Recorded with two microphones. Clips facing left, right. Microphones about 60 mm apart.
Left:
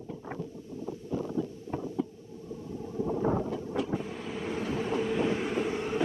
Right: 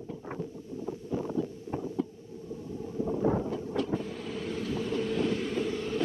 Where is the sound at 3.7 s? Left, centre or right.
Centre; by 5.0 s left.